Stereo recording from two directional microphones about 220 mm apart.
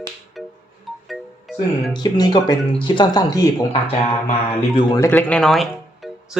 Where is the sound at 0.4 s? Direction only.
Centre (ahead or behind).